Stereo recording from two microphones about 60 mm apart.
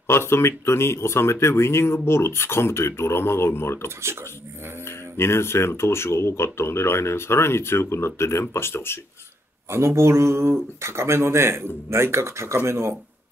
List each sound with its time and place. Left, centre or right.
0.0 s speech: left
9.7 s speech: right